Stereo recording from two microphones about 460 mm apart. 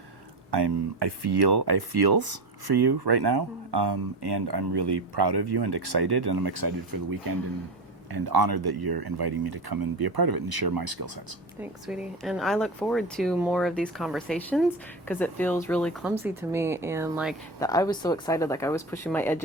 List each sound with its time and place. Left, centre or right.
0.5 s speech: right
11.6 s speech: centre